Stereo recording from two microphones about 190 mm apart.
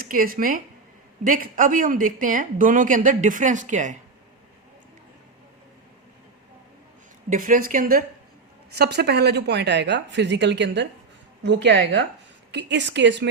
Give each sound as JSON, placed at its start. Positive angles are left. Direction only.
{"t": 0.0, "sound": "speech", "side_deg": -50}
{"t": 7.3, "sound": "speech", "side_deg": -45}
{"t": 8.7, "sound": "a woman's voice", "side_deg": -60}